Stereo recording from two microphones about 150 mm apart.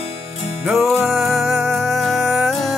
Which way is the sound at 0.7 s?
Centre (ahead or behind).